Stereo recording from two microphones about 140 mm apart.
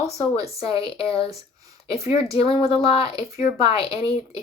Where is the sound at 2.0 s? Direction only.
40° left (ahead or behind).